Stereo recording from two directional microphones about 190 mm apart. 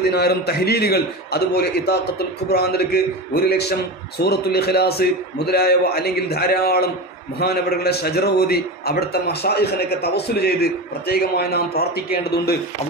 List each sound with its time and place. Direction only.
0.0 s a man's voice: 55° left (ahead or behind)